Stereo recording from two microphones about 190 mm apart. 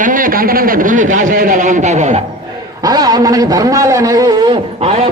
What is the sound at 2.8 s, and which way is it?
A man's voice, 20° right (ahead or behind).